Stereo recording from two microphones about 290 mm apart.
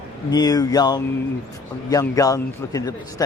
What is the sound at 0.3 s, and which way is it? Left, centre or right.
Speech, centre.